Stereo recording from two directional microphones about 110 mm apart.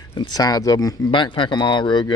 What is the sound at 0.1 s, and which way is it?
Speech, 40° left (ahead or behind).